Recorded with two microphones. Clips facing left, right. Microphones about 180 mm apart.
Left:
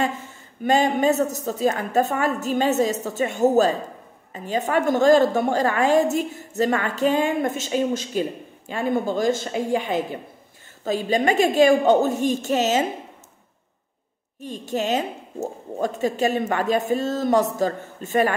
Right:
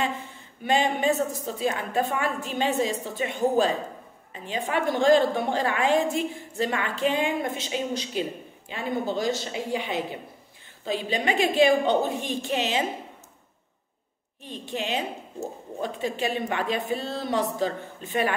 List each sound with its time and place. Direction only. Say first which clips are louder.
0.7 s a woman's voice: left 4 dB; 45° left (ahead or behind)
14.4 s a woman's voice: left 6 dB; 45° left (ahead or behind)